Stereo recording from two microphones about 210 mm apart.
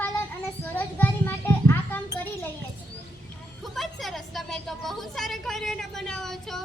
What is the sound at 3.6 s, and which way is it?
A woman's voice, centre (ahead or behind).